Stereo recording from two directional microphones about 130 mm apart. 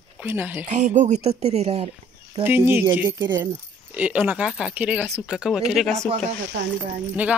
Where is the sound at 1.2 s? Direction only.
55° right (ahead or behind).